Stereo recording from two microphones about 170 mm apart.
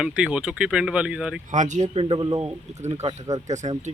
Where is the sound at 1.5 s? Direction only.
45° right (ahead or behind).